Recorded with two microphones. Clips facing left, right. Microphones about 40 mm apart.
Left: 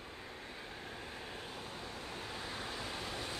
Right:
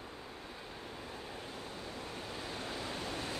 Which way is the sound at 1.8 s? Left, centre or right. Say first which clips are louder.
Right 1 dB; centre.